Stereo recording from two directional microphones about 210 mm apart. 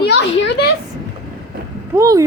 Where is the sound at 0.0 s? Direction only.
55° left (ahead or behind).